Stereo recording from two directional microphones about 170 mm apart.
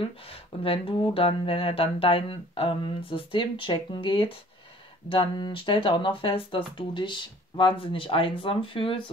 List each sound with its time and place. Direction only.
0.3 s speech: 35° left (ahead or behind)